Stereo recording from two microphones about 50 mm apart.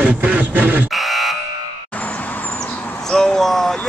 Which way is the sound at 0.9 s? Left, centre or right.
Centre.